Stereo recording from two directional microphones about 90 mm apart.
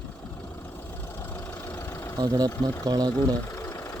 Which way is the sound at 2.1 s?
45° right (ahead or behind).